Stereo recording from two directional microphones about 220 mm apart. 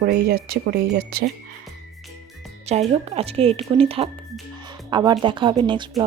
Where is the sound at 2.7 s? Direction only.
30° right (ahead or behind).